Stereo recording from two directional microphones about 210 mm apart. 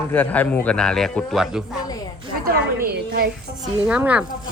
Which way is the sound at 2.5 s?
45° right (ahead or behind).